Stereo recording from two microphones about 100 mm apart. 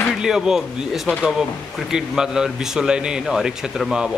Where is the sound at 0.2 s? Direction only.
5° right (ahead or behind).